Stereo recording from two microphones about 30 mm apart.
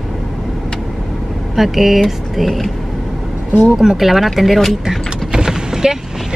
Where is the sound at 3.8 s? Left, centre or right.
Centre.